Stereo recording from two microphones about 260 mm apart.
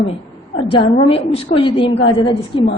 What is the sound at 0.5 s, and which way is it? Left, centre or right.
A woman's voice, left.